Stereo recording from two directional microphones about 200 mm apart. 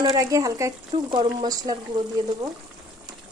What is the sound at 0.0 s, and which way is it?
Speech, 15° right (ahead or behind).